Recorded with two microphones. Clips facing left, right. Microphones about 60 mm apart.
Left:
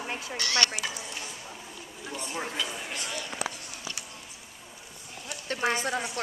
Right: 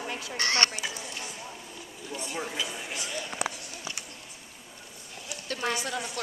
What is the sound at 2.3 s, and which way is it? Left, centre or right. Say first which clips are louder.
Speech: even; centre.